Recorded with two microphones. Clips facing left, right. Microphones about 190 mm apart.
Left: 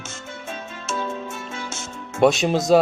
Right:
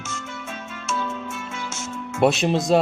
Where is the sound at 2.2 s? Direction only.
Centre (ahead or behind).